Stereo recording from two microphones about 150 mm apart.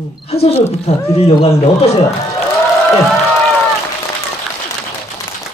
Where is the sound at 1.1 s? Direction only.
40° left (ahead or behind).